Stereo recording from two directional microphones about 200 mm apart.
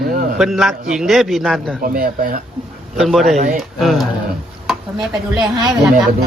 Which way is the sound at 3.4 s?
40° right (ahead or behind).